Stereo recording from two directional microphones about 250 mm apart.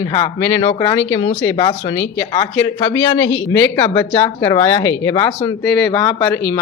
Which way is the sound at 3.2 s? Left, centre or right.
Left.